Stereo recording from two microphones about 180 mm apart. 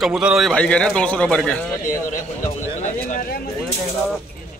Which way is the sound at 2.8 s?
45° left (ahead or behind).